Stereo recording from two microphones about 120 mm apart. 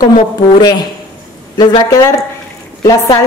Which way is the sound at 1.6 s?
35° left (ahead or behind).